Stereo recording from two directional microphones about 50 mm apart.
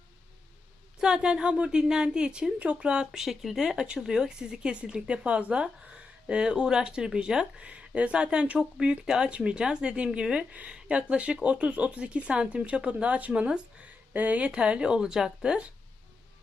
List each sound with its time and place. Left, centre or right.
0.9 s speech: centre
3.1 s speech: centre; by 14.5 s right
14.5 s speech: centre